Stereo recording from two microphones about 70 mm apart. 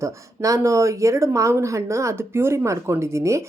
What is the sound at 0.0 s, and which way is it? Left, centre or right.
Speech, right.